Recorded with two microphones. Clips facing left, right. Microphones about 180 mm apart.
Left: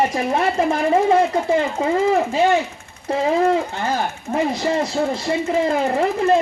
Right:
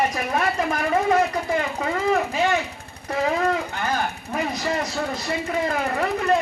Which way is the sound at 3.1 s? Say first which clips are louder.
Left 5 dB; 30° left (ahead or behind).